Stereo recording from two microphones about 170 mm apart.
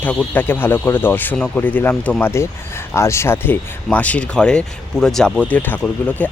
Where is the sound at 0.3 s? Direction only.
10° left (ahead or behind).